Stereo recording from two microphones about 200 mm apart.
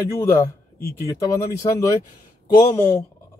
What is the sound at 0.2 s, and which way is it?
Speech, 10° left (ahead or behind).